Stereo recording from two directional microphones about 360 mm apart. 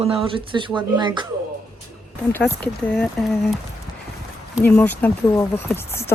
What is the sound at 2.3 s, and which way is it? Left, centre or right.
Speech, centre.